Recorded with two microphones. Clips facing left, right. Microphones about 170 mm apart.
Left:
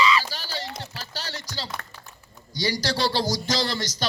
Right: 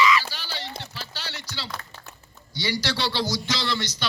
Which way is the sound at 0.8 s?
40° left (ahead or behind).